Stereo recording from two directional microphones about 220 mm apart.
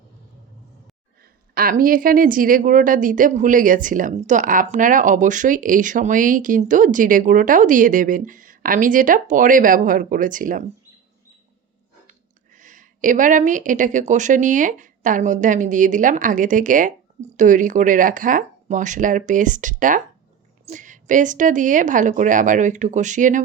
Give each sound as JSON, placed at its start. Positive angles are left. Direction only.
{"t": 1.2, "sound": "a woman's voice", "side_deg": -40}
{"t": 12.5, "sound": "a woman's voice", "side_deg": -35}